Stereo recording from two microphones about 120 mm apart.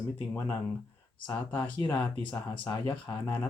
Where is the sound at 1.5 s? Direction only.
40° left (ahead or behind).